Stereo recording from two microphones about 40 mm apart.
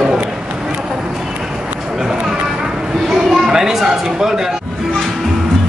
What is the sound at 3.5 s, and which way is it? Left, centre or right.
Speech, centre.